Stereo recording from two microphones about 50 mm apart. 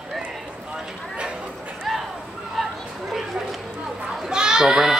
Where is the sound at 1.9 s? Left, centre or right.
Centre.